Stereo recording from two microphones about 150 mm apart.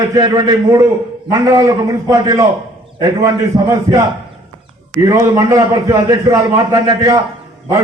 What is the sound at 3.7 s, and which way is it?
A man's voice, 20° right (ahead or behind).